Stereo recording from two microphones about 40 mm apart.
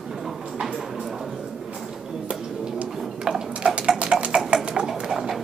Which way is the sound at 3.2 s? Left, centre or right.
Right.